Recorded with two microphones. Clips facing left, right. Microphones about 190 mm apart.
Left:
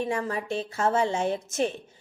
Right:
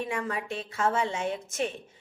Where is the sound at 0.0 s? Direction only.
35° left (ahead or behind).